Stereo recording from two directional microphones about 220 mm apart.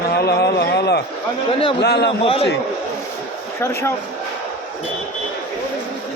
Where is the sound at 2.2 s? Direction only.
25° left (ahead or behind).